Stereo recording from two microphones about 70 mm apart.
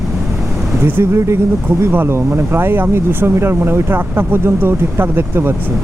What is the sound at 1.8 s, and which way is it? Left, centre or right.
Speech, right.